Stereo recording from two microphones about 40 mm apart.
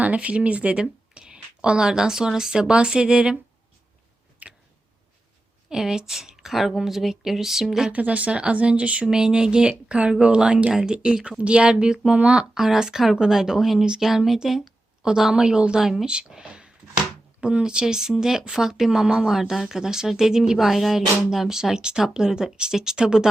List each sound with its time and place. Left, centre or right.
0.0 s speech: right
0.8 s speech: right
4.4 s tick: right
5.6 s speech: centre
7.9 s speech: right
9.0 s speech: centre
12.5 s speech: centre
15.8 s speech: centre
16.0 s speech: right